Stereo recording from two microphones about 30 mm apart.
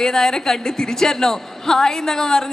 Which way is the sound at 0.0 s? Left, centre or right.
Centre.